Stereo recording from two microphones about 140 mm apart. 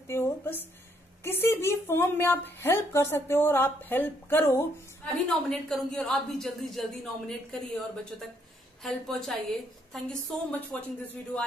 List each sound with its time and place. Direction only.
0.0 s a sound: 20° left (ahead or behind)
1.2 s a woman's voice: 15° left (ahead or behind)
5.0 s a woman's voice: 5° left (ahead or behind)